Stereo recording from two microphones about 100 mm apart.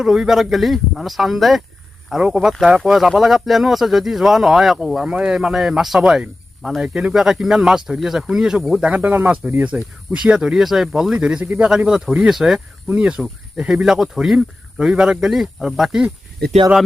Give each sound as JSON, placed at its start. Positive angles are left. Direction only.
{"t": 0.0, "sound": "speech", "side_deg": -5}